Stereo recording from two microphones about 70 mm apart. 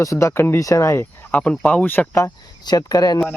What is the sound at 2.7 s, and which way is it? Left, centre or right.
Speech, left.